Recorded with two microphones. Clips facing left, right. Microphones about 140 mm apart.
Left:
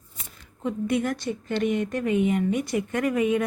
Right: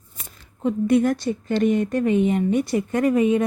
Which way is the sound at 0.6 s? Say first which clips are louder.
Right 7 dB; 35° right (ahead or behind).